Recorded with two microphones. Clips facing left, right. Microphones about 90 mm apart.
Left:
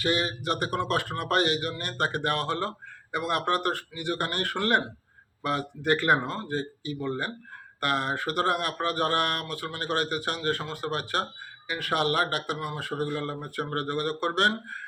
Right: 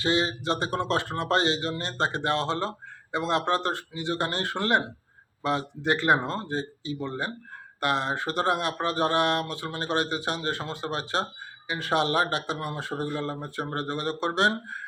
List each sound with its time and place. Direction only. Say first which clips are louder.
0.0 s speech: right 2 dB; 25° right (ahead or behind)